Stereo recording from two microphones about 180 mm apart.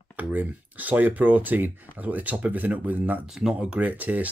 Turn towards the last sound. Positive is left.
turn(degrees=-10)  # may be behind; listen again after turning